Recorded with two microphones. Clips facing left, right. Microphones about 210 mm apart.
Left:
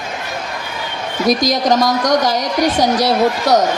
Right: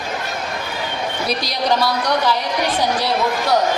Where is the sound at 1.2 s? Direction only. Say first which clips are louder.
Left 7 dB; 45° left (ahead or behind).